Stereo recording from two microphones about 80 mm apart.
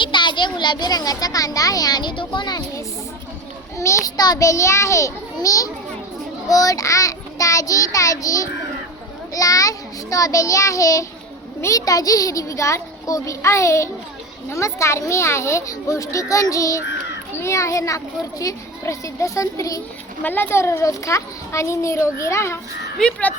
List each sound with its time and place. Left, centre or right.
0.0 s a child's voice: left
3.8 s a child's voice: left
6.5 s child singing: left
11.6 s a child's voice: left
20.2 s a child's voice: left